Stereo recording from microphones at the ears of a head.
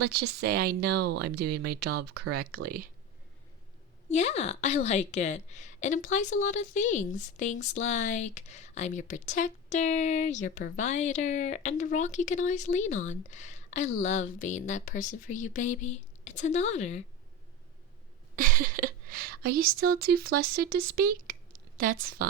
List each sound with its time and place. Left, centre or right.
0.0 s speech: right
4.1 s a woman's voice: left
18.3 s speech: right